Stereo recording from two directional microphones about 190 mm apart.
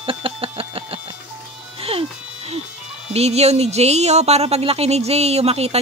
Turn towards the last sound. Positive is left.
turn(degrees=-35)  # may be behind; listen again after turning